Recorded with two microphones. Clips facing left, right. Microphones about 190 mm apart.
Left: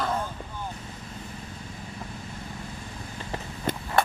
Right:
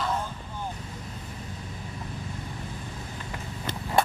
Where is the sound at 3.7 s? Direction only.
50° left (ahead or behind).